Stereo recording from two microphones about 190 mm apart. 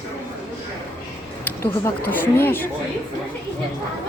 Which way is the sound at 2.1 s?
10° left (ahead or behind).